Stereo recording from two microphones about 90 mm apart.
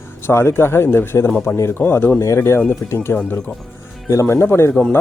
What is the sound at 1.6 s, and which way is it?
Speech, 25° left (ahead or behind).